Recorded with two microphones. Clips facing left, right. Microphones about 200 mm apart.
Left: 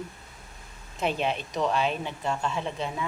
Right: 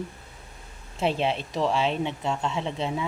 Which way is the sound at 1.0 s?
30° right (ahead or behind).